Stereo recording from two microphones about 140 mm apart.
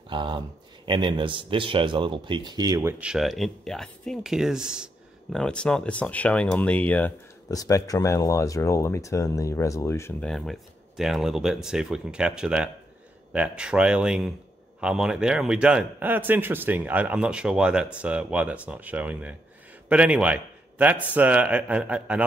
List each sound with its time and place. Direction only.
0.1 s speech: 35° right (ahead or behind)
3.0 s speech: 5° right (ahead or behind)
5.3 s speech: 5° left (ahead or behind)
7.5 s speech: 25° left (ahead or behind)
10.2 s a man's voice: 5° left (ahead or behind)